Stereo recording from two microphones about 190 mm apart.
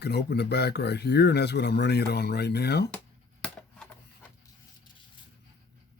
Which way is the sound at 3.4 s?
5° left (ahead or behind).